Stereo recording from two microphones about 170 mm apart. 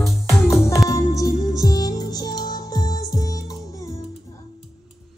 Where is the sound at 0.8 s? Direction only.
20° left (ahead or behind).